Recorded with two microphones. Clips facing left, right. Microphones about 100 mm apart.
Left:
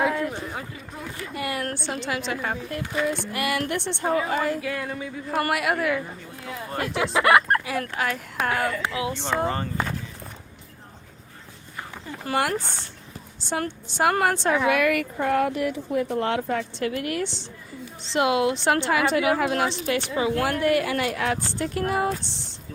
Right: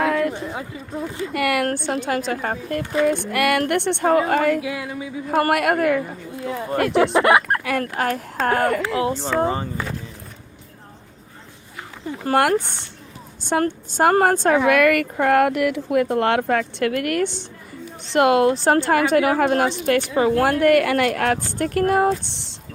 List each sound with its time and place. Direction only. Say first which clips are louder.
0.0 s a sound: right 4 dB; 65° right (ahead or behind)
1.3 s speech: right 8 dB; 70° right (ahead or behind)
1.7 s a woman's voice: right 6 dB; 50° right (ahead or behind)
4.6 s a sound: right 2 dB; 10° right (ahead or behind)
5.3 s a woman's voice: right 6 dB; 50° right (ahead or behind)
6.4 s speech: right 8 dB; 25° right (ahead or behind)
7.6 s speech: right 5 dB; 60° right (ahead or behind)
7.9 s a woman's voice: right 4 dB; 45° right (ahead or behind)
9.4 s a sound: right 5 dB; 15° right (ahead or behind)
12.2 s a woman's voice: right 7 dB; 50° right (ahead or behind)
14.7 s a woman's voice: right 5 dB; 60° right (ahead or behind)